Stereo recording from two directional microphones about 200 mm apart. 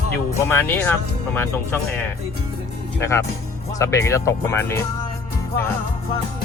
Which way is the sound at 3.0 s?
15° left (ahead or behind).